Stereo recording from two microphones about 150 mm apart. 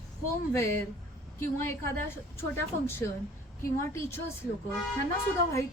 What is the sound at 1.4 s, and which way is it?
A woman's voice, 15° left (ahead or behind).